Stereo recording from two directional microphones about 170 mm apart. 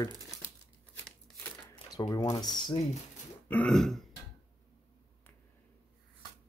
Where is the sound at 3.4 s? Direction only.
5° left (ahead or behind).